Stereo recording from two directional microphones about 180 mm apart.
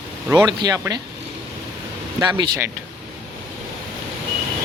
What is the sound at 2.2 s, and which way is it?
Speech, 25° right (ahead or behind).